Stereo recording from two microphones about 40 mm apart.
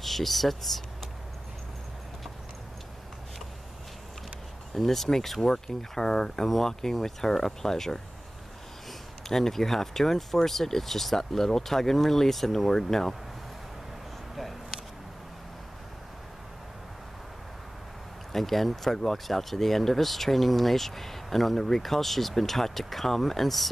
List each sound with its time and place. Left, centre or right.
0.0 s speech: centre
4.7 s speech: centre
9.3 s speech: centre
14.3 s a sound: centre
18.3 s speech: centre